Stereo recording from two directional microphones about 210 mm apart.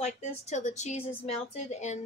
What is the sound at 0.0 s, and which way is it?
Speech, 35° left (ahead or behind).